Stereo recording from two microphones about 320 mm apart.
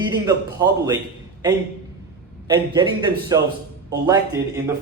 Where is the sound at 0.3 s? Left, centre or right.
Centre.